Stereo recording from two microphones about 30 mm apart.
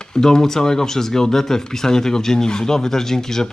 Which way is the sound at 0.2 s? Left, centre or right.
Centre.